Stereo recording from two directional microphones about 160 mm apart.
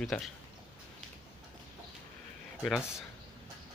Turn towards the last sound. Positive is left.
turn(degrees=-5)  # may be behind; listen again after turning